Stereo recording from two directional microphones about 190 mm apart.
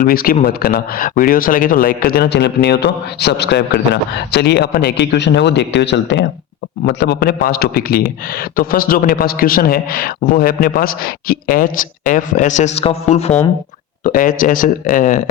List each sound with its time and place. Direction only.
0.0 s a man's voice: 50° left (ahead or behind); by 13.3 s 35° left (ahead or behind)
14.0 s speech: 45° left (ahead or behind)